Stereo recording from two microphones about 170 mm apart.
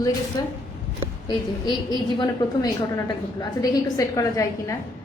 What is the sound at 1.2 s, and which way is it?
A woman's voice, 25° left (ahead or behind).